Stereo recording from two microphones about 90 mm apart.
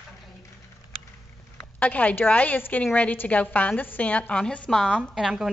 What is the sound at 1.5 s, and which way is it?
A woman's voice, 15° left (ahead or behind).